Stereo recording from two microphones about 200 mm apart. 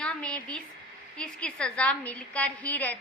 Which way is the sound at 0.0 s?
5° left (ahead or behind).